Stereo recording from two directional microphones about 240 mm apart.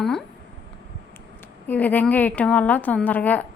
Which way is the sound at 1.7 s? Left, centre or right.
Centre.